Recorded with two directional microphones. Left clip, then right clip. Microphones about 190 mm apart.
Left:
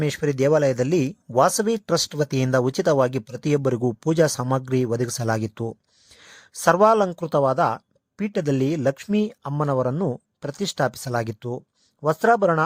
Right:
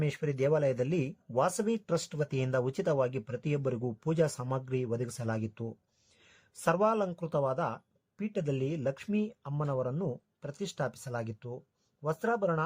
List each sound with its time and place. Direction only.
0.0 s speech: 30° left (ahead or behind)